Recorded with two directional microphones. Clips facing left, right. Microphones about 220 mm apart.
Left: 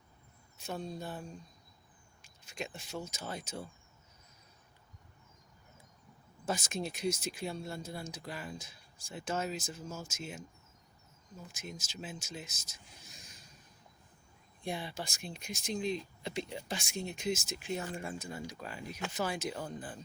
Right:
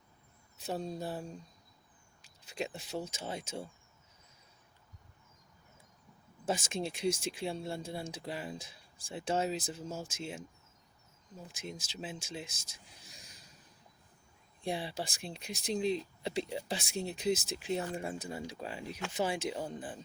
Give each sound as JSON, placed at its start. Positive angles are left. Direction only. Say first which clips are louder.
{"t": 0.5, "sound": "speech", "louder": "right 3 dB", "side_deg": -35}
{"t": 2.2, "sound": "speech", "louder": "right 4 dB", "side_deg": -35}
{"t": 6.4, "sound": "speech", "louder": "right 2 dB", "side_deg": -25}
{"t": 11.4, "sound": "speech", "louder": "right 2 dB", "side_deg": -30}
{"t": 14.6, "sound": "speech", "louder": "right 3 dB", "side_deg": -30}